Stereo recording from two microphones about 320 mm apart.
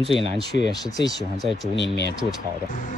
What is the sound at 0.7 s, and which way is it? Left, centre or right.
Speech, centre.